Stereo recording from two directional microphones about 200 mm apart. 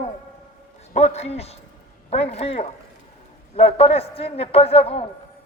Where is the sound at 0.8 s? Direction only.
30° left (ahead or behind).